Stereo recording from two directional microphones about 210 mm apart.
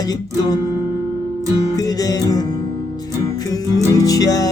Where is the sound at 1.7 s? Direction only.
15° left (ahead or behind).